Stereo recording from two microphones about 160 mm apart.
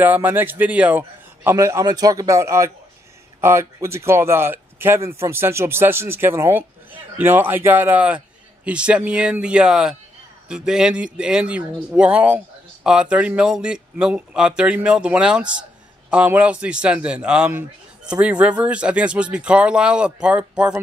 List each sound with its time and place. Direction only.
0.0 s a man's voice: 10° right (ahead or behind)